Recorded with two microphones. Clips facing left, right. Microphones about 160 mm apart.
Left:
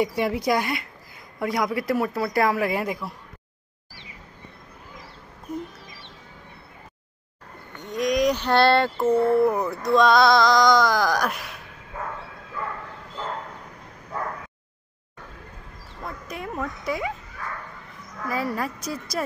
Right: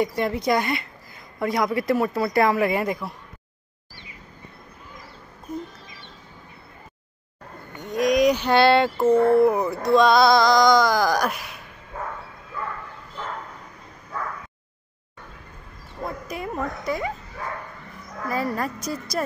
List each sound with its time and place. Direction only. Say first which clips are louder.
0.0 s speech: even; 5° left (ahead or behind)
7.9 s a sound: right 3 dB; 55° right (ahead or behind)
8.2 s a sound: right 1 dB; 5° right (ahead or behind)
9.4 s speech: right 2 dB; 5° right (ahead or behind)
16.3 s a woman's voice: even; centre (ahead or behind)
17.4 s bow-wow: right 4 dB; 30° right (ahead or behind)
18.3 s speech: right 1 dB; 5° left (ahead or behind)